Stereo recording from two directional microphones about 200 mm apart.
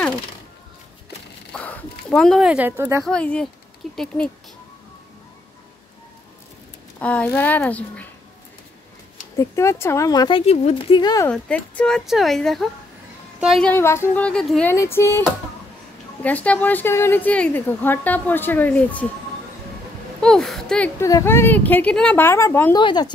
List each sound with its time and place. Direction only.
1.5 s a sound: 5° left (ahead or behind); by 3.1 s 10° right (ahead or behind)
3.1 s speech: 5° left (ahead or behind)
7.0 s a woman's voice: 5° left (ahead or behind)
9.4 s speech: 15° left (ahead or behind)
11.2 s speech: 5° left (ahead or behind)
14.7 s a woman's voice: 10° left (ahead or behind)
20.2 s a woman's voice: 5° left (ahead or behind)
22.8 s speech: 20° left (ahead or behind)